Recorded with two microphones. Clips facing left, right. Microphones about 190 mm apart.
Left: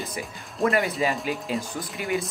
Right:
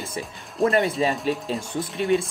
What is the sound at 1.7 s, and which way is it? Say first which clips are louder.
Speech: right 6 dB; 25° right (ahead or behind).